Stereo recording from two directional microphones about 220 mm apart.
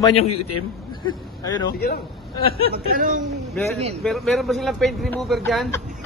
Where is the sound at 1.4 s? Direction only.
15° left (ahead or behind).